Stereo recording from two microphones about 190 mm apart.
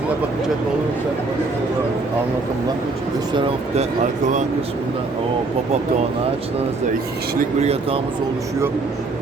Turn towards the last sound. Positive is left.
turn(degrees=-35)  # may be behind; listen again after turning